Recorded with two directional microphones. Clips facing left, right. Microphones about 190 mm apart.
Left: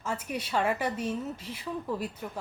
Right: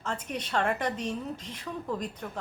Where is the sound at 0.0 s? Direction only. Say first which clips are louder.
Left 1 dB; 10° left (ahead or behind).